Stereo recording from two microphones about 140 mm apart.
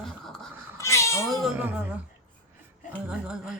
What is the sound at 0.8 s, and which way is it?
Cat, 20° left (ahead or behind).